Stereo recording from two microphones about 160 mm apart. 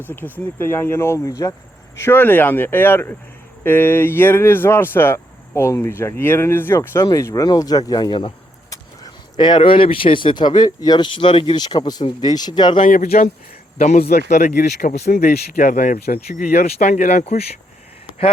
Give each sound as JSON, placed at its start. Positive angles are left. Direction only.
{"t": 0.3, "sound": "speech", "side_deg": 15}
{"t": 9.4, "sound": "speech", "side_deg": 30}
{"t": 12.8, "sound": "speech", "side_deg": 55}
{"t": 14.0, "sound": "speech", "side_deg": 75}
{"t": 14.3, "sound": "speech", "side_deg": 50}
{"t": 15.2, "sound": "speech", "side_deg": 50}
{"t": 16.6, "sound": "speech", "side_deg": 40}